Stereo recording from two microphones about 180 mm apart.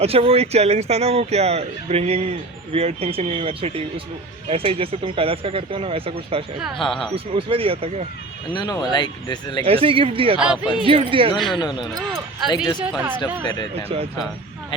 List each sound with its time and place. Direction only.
0.0 s speech: 35° right (ahead or behind)
6.8 s speech: centre (ahead or behind)
7.3 s speech: 30° right (ahead or behind)
8.5 s speech: 25° left (ahead or behind)
9.6 s speech: 30° right (ahead or behind)
10.3 s speech: 5° right (ahead or behind)
10.8 s speech: 30° right (ahead or behind)
11.3 s speech: centre (ahead or behind)
11.6 s speech: 25° left (ahead or behind)
12.8 s speech: 5° right (ahead or behind)
13.4 s speech: 25° left (ahead or behind)
13.7 s speech: 35° right (ahead or behind)